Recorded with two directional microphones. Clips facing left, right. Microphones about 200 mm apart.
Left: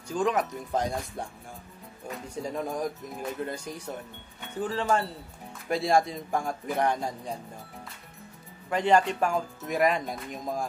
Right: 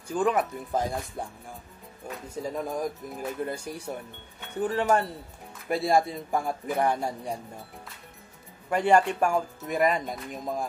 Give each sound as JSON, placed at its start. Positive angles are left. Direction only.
{"t": 0.1, "sound": "speech", "side_deg": -5}
{"t": 5.7, "sound": "speech", "side_deg": 0}
{"t": 8.6, "sound": "speech", "side_deg": -10}